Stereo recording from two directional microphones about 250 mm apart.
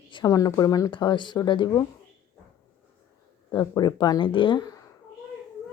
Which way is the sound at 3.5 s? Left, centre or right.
Centre.